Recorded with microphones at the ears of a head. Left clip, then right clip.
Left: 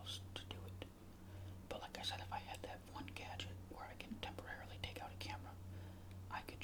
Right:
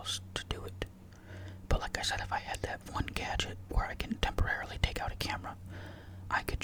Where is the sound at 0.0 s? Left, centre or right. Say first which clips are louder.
Right 12 dB; right.